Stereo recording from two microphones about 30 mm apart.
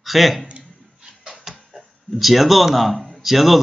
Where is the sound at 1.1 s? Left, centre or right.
Centre.